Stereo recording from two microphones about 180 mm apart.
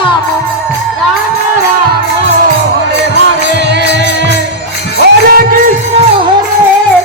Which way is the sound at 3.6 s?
75° right (ahead or behind).